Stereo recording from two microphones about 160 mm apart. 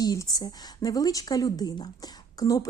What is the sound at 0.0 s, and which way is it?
Speech, 25° left (ahead or behind).